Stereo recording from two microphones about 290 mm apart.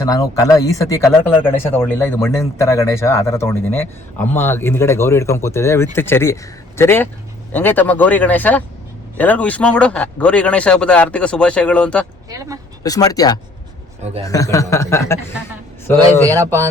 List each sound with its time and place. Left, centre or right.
0.0 s speech: centre
12.3 s speech: centre
12.8 s speech: centre
14.0 s a man's voice: right
14.3 s speech: centre
16.3 s speech: centre